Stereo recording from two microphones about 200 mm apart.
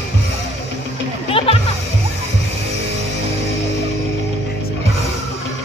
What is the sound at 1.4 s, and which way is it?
Music, 30° left (ahead or behind).